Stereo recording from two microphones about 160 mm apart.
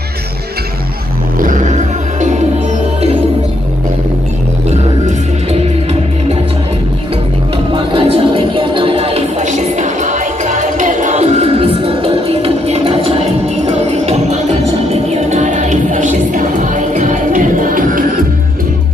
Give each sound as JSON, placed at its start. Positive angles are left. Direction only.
{"t": 1.4, "sound": "music", "side_deg": -50}
{"t": 7.7, "sound": "music", "side_deg": -35}